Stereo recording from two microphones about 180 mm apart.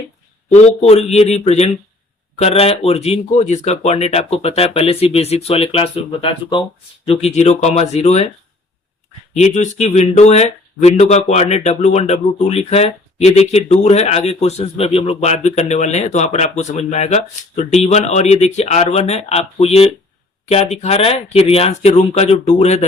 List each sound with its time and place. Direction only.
0.5 s speech: 40° left (ahead or behind)
9.3 s speech: 40° left (ahead or behind)